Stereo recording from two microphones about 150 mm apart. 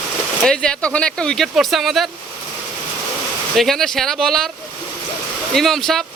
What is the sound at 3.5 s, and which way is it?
Speech, centre (ahead or behind).